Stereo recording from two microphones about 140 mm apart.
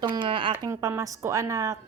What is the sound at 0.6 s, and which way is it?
A woman's voice, 20° right (ahead or behind).